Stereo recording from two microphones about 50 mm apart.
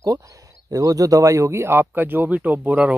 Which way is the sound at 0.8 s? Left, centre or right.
Right.